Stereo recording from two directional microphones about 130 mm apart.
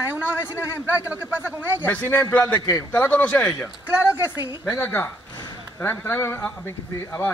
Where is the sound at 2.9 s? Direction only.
15° left (ahead or behind).